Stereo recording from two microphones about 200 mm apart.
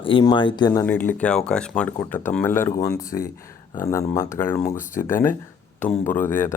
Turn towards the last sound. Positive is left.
turn(degrees=10)  # may be behind; listen again after turning